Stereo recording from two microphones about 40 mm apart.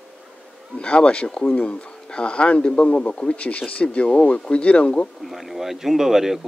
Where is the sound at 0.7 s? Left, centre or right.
Left.